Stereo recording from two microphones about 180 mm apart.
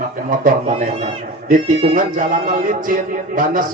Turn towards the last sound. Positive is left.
turn(degrees=-50)  # may be behind; listen again after turning